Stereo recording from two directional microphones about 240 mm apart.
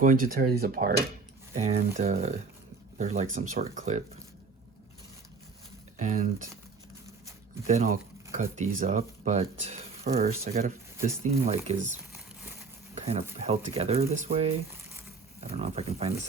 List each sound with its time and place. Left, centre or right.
0.0 s speech: right
6.0 s speech: right
7.7 s speech: right
12.9 s a sound: right
13.4 s speech: right